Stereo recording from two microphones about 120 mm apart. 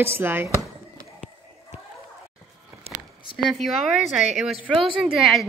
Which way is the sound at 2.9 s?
55° right (ahead or behind).